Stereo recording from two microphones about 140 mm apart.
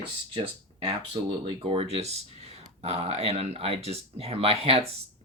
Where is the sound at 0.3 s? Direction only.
40° right (ahead or behind).